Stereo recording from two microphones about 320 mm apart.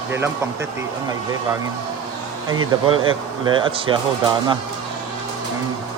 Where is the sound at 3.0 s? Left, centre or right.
Centre.